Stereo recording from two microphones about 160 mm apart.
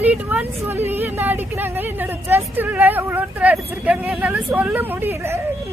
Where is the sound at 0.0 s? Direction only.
10° right (ahead or behind).